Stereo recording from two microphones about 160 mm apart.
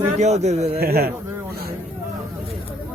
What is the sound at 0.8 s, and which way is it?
Speech, 75° right (ahead or behind).